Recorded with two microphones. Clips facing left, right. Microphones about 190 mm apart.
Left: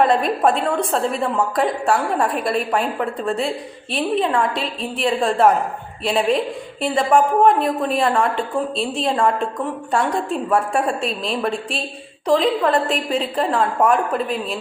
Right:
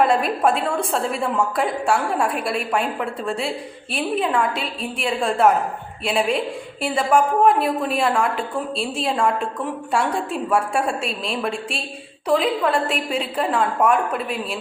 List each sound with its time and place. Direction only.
0.0 s a woman's voice: centre (ahead or behind)